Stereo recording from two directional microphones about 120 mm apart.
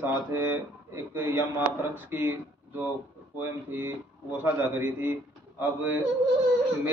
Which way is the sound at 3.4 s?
20° right (ahead or behind).